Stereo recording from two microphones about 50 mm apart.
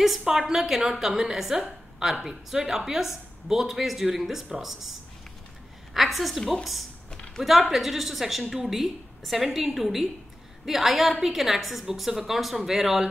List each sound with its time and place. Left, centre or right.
0.0 s speech: centre
5.9 s a woman's voice: centre
7.1 s a sound: centre
7.4 s a woman's voice: centre